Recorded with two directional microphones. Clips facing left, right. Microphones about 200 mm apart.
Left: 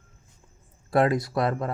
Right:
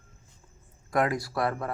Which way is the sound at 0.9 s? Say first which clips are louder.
Left 5 dB; 30° left (ahead or behind).